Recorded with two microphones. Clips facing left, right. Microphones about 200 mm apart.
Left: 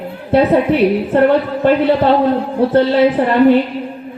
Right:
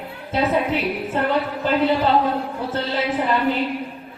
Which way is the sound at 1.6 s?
60° left (ahead or behind).